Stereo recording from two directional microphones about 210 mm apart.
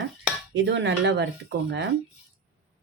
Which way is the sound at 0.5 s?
60° right (ahead or behind).